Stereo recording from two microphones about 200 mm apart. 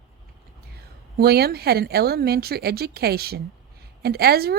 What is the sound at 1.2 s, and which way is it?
Speech, 50° right (ahead or behind).